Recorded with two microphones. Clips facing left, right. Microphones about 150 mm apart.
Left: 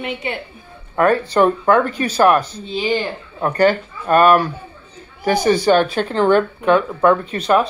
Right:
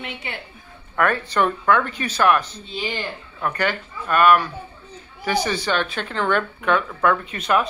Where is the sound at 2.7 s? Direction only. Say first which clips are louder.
Left 8 dB; 25° left (ahead or behind).